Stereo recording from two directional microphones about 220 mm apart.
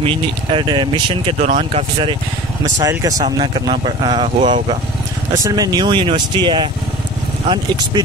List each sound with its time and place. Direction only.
0.0 s speech: 25° right (ahead or behind)
1.4 s speech: 30° right (ahead or behind)
5.4 s speech: 15° right (ahead or behind)